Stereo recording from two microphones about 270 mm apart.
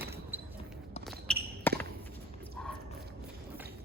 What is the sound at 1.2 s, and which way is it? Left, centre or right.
Basketball bounce, centre.